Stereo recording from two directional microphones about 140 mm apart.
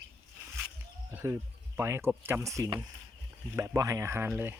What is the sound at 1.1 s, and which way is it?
Speech, 20° right (ahead or behind).